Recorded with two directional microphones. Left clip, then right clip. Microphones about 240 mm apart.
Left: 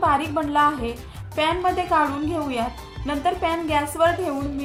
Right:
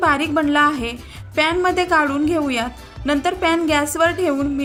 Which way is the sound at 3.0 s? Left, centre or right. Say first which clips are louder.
Right 4 dB; right.